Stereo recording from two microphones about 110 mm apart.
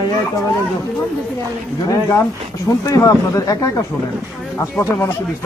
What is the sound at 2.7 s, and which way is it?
Speech, 30° left (ahead or behind).